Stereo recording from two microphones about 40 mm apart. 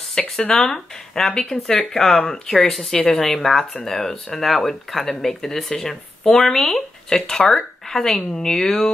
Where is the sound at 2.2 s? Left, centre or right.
Left.